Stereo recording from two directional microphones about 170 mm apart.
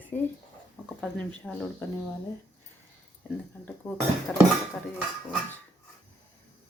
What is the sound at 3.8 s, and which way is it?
Speech, 5° left (ahead or behind).